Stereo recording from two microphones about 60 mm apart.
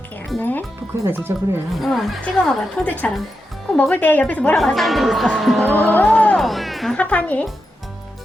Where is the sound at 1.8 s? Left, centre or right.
Centre.